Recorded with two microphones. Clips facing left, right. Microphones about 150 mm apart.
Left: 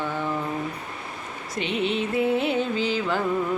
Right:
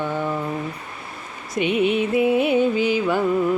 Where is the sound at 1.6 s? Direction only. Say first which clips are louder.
Right 6 dB; 15° right (ahead or behind).